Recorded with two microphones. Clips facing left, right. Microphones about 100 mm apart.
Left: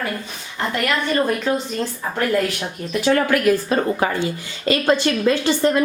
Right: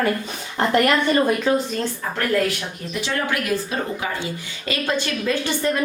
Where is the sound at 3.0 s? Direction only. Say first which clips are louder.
Left 8 dB; 50° left (ahead or behind).